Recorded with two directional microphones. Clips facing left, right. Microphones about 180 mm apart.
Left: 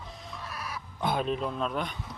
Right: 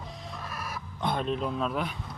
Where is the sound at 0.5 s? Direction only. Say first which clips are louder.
Even; 50° right (ahead or behind).